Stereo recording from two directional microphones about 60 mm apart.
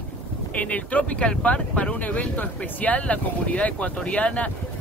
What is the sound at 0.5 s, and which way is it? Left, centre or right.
Speech, left.